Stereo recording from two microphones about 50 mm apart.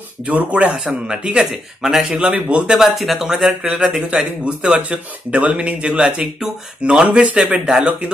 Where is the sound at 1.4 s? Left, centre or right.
Centre.